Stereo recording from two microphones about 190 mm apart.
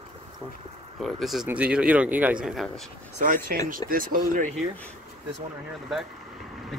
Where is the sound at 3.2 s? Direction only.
45° right (ahead or behind).